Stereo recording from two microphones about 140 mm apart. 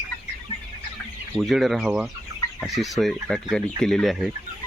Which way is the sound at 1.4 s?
Centre (ahead or behind).